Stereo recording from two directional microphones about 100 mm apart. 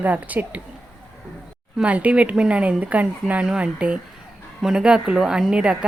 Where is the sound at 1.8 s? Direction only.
15° right (ahead or behind).